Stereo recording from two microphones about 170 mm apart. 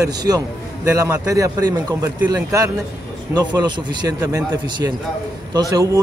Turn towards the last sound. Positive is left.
turn(degrees=-20)  # may be behind; listen again after turning